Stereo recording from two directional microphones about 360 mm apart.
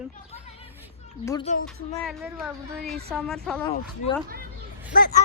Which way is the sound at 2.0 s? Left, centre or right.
Centre.